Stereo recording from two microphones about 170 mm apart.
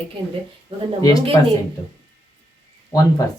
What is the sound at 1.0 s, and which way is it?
Speech, 20° left (ahead or behind).